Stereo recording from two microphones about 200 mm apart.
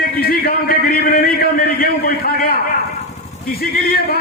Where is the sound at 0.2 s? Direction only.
50° left (ahead or behind).